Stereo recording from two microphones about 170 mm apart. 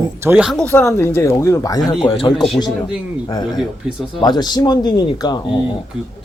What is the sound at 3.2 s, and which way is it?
Speech, 25° left (ahead or behind).